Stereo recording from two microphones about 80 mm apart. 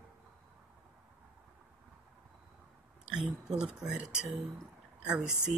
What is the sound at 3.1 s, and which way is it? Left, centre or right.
Speech, centre.